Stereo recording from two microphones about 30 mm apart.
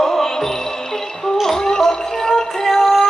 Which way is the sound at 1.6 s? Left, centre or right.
Left.